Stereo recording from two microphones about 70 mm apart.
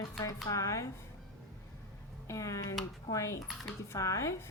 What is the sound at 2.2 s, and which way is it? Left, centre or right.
Speech, left.